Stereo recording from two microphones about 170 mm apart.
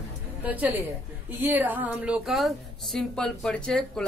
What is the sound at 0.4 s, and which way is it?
A woman's voice, 10° right (ahead or behind).